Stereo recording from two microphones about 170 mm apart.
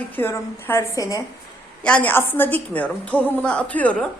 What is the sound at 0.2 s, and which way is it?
A woman's voice, 15° left (ahead or behind).